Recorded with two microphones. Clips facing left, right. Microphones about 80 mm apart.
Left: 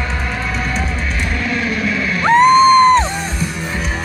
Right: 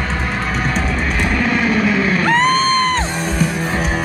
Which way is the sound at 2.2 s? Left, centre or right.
Centre.